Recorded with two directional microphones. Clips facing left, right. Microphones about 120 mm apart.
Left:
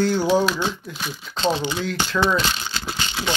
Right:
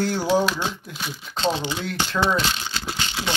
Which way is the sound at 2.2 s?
25° right (ahead or behind).